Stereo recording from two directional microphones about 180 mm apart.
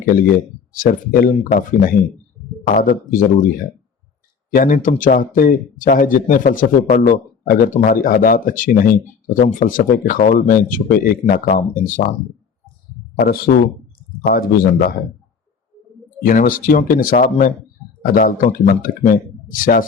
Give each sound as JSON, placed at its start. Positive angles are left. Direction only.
{"t": 0.7, "sound": "speech", "side_deg": 50}
{"t": 4.5, "sound": "speech", "side_deg": 50}
{"t": 13.1, "sound": "speech", "side_deg": 55}
{"t": 16.2, "sound": "speech", "side_deg": 50}